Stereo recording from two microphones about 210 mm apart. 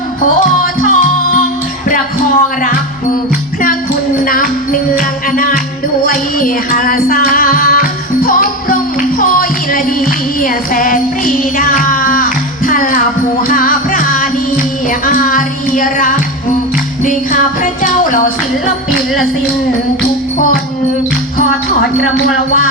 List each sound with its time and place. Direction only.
0.6 s music: 40° left (ahead or behind)
4.3 s music: 40° left (ahead or behind)
6.7 s music: 40° left (ahead or behind)